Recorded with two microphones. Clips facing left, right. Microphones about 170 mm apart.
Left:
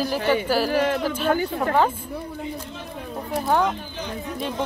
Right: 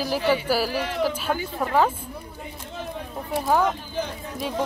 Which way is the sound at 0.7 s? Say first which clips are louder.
Left 7 dB; 55° left (ahead or behind).